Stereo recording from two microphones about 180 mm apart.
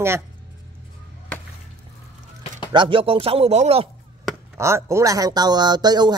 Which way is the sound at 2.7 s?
25° right (ahead or behind).